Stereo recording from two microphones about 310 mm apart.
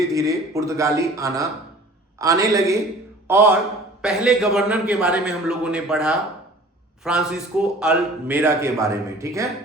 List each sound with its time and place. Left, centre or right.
0.1 s a man's voice: centre